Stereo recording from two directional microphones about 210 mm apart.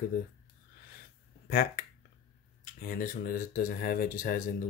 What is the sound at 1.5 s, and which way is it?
Speech, 45° left (ahead or behind).